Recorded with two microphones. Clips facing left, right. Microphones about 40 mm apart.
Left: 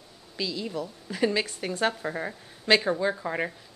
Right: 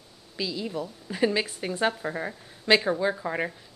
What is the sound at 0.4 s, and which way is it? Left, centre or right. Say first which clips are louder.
A woman's voice: even; centre.